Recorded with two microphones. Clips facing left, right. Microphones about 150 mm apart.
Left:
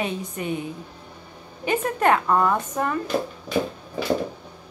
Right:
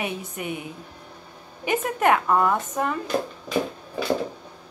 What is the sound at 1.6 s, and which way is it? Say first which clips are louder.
Speech: left 1 dB; 15° right (ahead or behind).